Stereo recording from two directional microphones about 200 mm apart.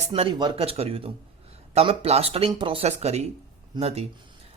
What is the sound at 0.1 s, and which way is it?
A man's voice, 25° right (ahead or behind).